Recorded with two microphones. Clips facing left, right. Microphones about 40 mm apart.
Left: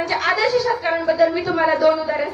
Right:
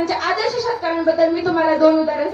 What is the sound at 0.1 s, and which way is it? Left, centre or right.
A woman's voice, left.